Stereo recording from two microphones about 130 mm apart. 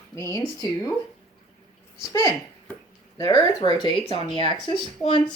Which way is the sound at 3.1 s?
30° left (ahead or behind).